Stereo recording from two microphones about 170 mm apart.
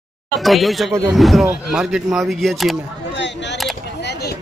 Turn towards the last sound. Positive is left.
turn(degrees=90)